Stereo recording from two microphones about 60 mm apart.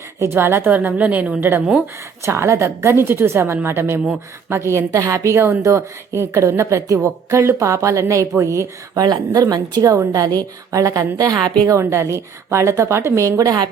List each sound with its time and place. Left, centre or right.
0.2 s a woman's voice: right
0.7 s a woman's voice: right
1.4 s a woman's voice: right
2.2 s a woman's voice: right
4.9 s a woman's voice: right
6.8 s a woman's voice: right
10.1 s a woman's voice: right
11.7 s a woman's voice: right